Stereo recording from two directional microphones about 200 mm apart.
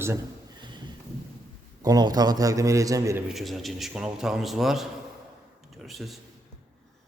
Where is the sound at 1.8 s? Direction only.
20° right (ahead or behind).